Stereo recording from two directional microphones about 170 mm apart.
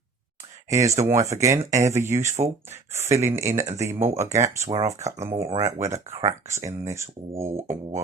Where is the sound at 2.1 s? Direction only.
45° right (ahead or behind).